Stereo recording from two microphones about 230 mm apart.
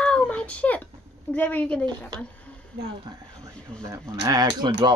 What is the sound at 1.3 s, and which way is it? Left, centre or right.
Speech, centre.